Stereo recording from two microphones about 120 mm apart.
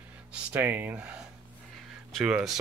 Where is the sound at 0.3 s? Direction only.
15° right (ahead or behind).